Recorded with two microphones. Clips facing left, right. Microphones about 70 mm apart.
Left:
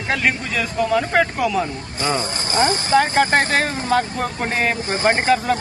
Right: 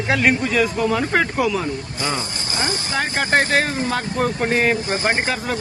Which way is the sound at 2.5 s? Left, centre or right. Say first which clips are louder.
Left 7 dB; left.